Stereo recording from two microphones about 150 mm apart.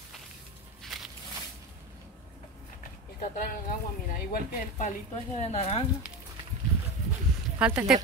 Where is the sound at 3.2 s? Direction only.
70° left (ahead or behind).